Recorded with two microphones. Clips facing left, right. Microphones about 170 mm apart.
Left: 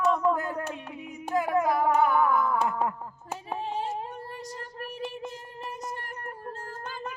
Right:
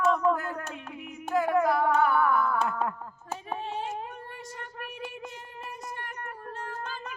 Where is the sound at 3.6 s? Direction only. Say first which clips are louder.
Left 2 dB; 35° left (ahead or behind).